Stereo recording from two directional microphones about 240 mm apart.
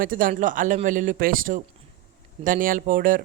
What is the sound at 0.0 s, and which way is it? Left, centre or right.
Speech, right.